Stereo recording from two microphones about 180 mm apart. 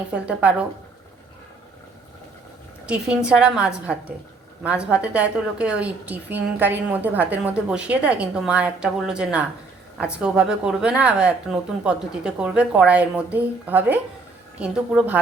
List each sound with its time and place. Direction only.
0.1 s a woman's voice: 5° right (ahead or behind)
2.8 s a woman's voice: 5° right (ahead or behind)